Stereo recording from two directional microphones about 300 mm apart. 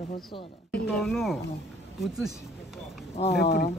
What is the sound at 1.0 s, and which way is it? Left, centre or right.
Speech, centre.